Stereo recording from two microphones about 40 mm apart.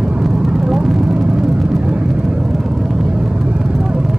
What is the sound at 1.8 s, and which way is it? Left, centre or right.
Vehicle, right.